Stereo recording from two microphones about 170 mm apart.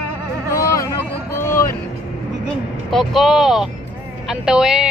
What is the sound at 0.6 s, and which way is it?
Speech, 20° left (ahead or behind).